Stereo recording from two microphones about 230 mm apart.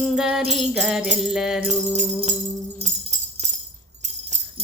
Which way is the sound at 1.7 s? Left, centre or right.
Right.